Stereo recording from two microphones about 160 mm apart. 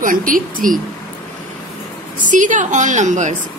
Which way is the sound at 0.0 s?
60° right (ahead or behind).